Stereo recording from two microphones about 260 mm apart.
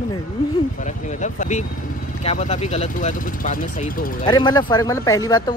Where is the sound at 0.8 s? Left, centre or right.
Left.